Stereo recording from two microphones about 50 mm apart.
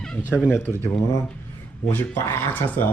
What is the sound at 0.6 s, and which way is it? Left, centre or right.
Speech, left.